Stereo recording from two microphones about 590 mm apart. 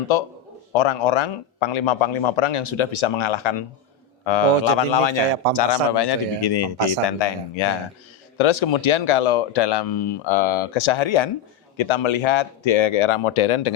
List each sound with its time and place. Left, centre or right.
0.1 s a man's voice: left